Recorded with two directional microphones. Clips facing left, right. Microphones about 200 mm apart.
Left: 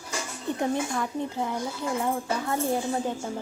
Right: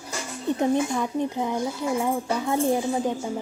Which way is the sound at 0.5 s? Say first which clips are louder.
Right 4 dB; 20° right (ahead or behind).